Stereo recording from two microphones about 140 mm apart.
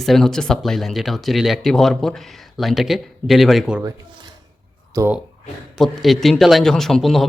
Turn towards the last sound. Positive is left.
turn(degrees=0)  # may be behind; listen again after turning